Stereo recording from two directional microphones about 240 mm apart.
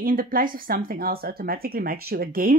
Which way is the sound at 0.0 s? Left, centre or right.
Right.